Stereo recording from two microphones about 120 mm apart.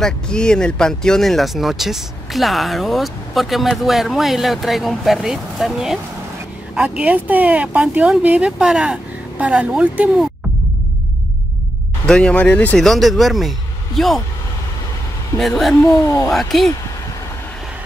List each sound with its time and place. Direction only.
0.0 s speech: 5° left (ahead or behind); by 10.2 s 10° right (ahead or behind)
12.1 s speech: 10° left (ahead or behind)
15.3 s speech: 5° left (ahead or behind)
15.8 s speech: 25° left (ahead or behind)
16.3 s speech: centre (ahead or behind)